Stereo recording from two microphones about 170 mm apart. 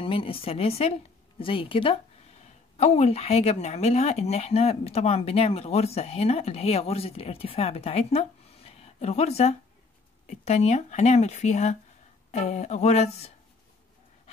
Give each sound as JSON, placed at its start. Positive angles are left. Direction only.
{"t": 0.0, "sound": "speech", "side_deg": 30}